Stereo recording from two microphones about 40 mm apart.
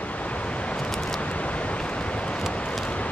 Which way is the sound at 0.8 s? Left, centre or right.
Centre.